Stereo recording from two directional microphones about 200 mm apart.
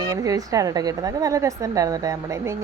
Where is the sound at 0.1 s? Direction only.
15° right (ahead or behind).